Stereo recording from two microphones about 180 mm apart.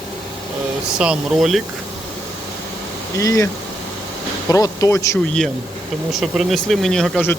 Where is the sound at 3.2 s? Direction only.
20° left (ahead or behind).